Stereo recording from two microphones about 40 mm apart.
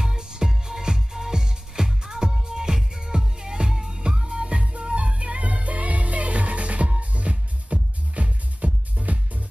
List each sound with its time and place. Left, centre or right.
0.0 s music: centre; by 9.4 s right